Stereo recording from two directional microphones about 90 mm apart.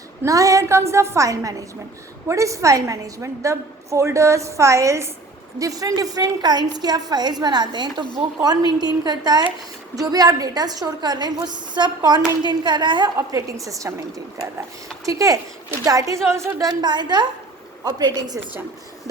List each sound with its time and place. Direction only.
0.3 s a woman's voice: 40° right (ahead or behind); by 13.1 s 55° right (ahead or behind)
13.1 s a woman's voice: 35° right (ahead or behind)
15.0 s a woman's voice: 40° right (ahead or behind)
16.6 s a woman's voice: 55° right (ahead or behind)